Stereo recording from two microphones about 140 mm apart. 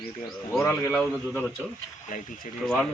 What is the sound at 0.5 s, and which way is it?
Speech, 15° left (ahead or behind).